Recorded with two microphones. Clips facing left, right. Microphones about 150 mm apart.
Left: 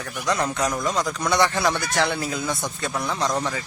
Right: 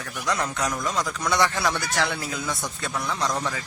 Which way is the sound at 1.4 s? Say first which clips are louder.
Left 2 dB; centre (ahead or behind).